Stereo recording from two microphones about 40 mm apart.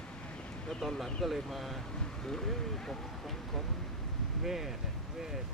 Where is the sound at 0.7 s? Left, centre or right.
Centre.